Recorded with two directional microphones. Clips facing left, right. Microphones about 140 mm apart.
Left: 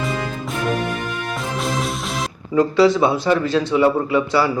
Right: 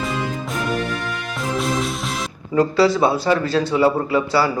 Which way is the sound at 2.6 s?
35° right (ahead or behind).